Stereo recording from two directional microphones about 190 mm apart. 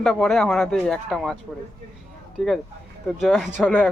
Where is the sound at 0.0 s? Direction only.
Centre (ahead or behind).